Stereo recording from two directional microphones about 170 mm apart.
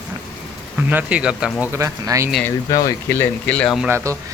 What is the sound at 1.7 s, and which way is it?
Speech, 15° right (ahead or behind).